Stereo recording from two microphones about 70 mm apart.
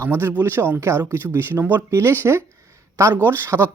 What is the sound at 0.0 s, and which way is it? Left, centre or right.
Speech, right.